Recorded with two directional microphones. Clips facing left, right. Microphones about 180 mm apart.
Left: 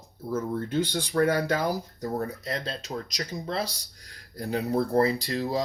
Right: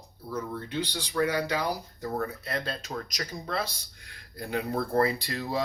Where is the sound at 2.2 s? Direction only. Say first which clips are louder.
Right 1 dB; 30° left (ahead or behind).